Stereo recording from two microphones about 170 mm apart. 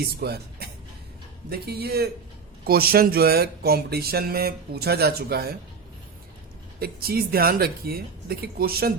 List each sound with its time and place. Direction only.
0.0 s speech: 70° right (ahead or behind)
6.7 s speech: 65° right (ahead or behind)